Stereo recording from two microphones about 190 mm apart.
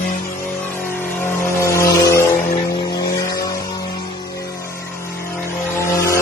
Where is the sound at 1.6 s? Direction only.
15° left (ahead or behind).